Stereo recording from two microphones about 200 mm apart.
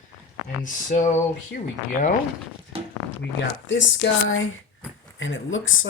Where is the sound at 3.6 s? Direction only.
65° left (ahead or behind).